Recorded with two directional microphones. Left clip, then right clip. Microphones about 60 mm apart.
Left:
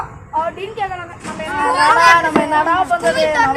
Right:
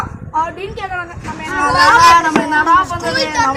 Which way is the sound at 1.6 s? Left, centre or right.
Centre.